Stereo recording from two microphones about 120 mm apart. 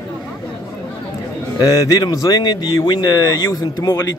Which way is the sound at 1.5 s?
30° left (ahead or behind).